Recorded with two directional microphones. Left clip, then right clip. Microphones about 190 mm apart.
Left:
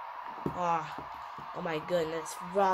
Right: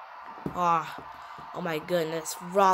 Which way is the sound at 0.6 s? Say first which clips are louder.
Right 6 dB; 30° right (ahead or behind).